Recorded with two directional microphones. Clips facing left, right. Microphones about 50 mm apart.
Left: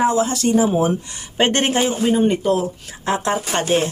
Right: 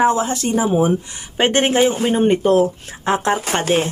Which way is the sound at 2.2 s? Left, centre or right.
Right.